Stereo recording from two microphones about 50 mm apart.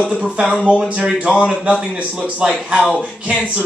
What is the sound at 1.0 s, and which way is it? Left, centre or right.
Speech, right.